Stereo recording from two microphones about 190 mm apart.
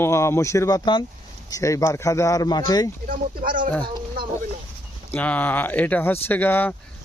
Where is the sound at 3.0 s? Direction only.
45° right (ahead or behind).